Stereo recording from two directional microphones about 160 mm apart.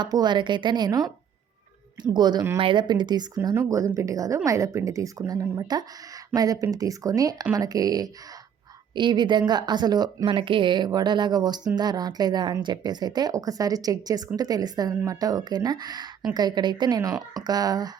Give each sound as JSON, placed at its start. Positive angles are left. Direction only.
{"t": 0.0, "sound": "speech", "side_deg": -25}
{"t": 2.1, "sound": "speech", "side_deg": -25}